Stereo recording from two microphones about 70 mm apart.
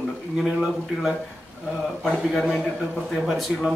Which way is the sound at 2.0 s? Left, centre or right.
Centre.